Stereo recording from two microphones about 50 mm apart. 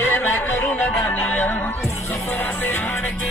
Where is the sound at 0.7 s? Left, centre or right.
Left.